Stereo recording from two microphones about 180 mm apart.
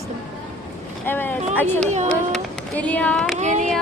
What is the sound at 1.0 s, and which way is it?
Speech, 10° left (ahead or behind).